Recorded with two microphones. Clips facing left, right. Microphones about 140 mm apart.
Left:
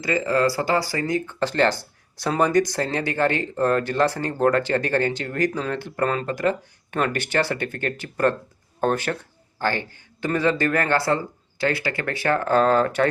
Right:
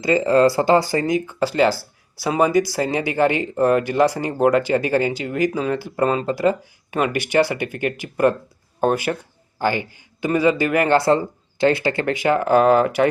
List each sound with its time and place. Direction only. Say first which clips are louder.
0.0 s speech: right 6 dB; 25° right (ahead or behind)
6.4 s speech: right 4 dB; 10° right (ahead or behind)